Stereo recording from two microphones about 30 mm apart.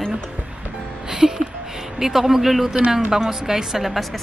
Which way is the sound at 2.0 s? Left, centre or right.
Centre.